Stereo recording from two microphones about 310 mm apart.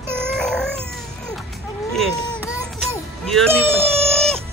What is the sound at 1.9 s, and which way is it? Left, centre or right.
Speech, centre.